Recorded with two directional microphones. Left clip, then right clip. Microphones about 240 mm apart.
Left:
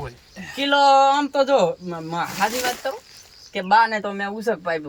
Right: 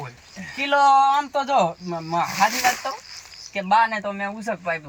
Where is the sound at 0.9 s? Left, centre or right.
Left.